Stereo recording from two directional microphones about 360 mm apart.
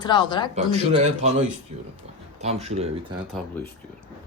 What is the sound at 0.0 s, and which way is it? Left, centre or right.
Speech, centre.